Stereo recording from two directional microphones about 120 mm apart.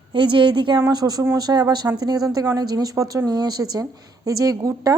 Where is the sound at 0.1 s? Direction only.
45° right (ahead or behind).